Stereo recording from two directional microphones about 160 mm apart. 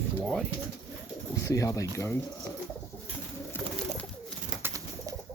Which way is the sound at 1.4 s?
20° left (ahead or behind).